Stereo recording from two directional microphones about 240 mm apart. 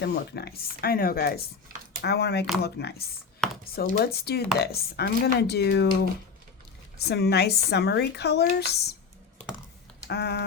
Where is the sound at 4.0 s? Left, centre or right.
Left.